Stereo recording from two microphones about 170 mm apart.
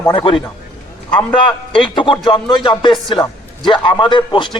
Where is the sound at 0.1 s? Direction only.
30° left (ahead or behind).